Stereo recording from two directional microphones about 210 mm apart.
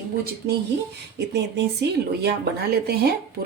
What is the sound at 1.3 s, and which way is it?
Speech, 55° right (ahead or behind).